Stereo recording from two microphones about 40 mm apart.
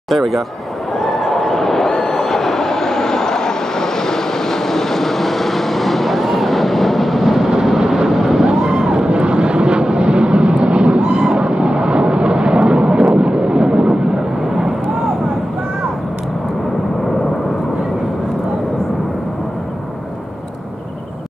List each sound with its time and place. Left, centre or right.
0.1 s speech: centre
0.9 s a sound: centre
7.6 s vehicle: centre